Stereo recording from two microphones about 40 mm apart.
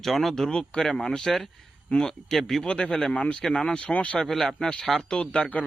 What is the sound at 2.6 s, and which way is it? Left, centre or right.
A man's voice, left.